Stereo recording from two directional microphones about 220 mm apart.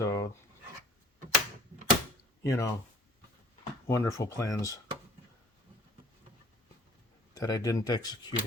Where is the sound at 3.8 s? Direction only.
15° left (ahead or behind).